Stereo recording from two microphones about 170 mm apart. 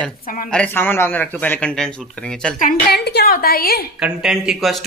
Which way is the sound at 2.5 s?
60° left (ahead or behind).